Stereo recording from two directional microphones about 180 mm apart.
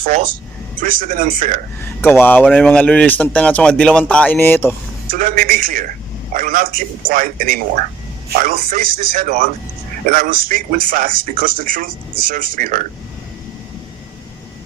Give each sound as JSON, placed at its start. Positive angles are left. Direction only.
{"t": 0.0, "sound": "a man's voice", "side_deg": -50}
{"t": 1.8, "sound": "speech", "side_deg": 10}
{"t": 5.1, "sound": "a man's voice", "side_deg": -50}